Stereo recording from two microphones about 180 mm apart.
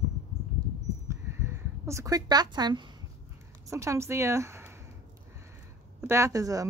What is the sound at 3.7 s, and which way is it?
A woman's voice, 15° right (ahead or behind).